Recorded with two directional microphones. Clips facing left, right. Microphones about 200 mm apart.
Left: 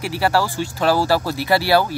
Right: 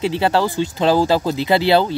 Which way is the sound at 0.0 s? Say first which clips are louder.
Right 2 dB; 20° right (ahead or behind).